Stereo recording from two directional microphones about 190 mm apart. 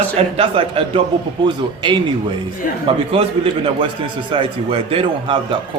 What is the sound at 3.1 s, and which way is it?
A man's voice, 30° right (ahead or behind).